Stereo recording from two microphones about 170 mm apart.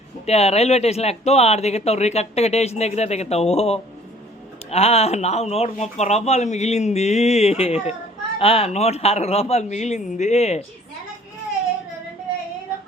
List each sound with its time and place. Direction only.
0.3 s speech: 40° left (ahead or behind)